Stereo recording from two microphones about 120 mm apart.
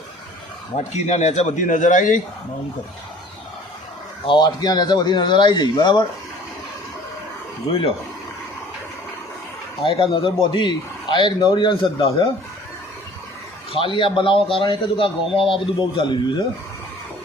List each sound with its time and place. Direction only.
0.9 s speech: 70° left (ahead or behind); by 2.2 s 90° left
4.3 s speech: 35° left (ahead or behind)
7.7 s a man's voice: 50° left (ahead or behind)
9.8 s a man's voice: 45° left (ahead or behind)
13.7 s a man's voice: 45° left (ahead or behind)